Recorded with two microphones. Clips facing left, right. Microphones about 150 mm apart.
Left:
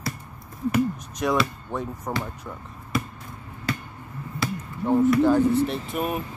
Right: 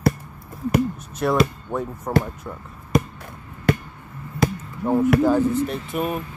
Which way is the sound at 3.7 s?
55° right (ahead or behind).